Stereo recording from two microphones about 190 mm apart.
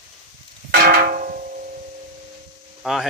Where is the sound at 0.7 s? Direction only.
45° right (ahead or behind).